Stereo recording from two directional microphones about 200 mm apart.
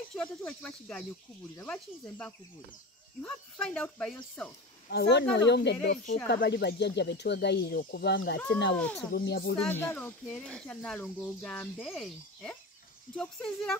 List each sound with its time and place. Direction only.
0.1 s speech: 5° left (ahead or behind)
4.8 s speech: 55° left (ahead or behind)
8.7 s speech: 5° left (ahead or behind)
9.1 s speech: 50° left (ahead or behind)
9.6 s speech: 10° left (ahead or behind)